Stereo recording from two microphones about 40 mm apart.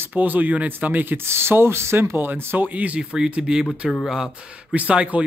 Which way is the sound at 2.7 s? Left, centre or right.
Right.